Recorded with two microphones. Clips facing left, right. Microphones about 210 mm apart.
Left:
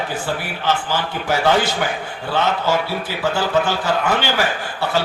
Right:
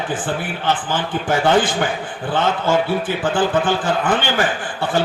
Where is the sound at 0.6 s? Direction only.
50° right (ahead or behind).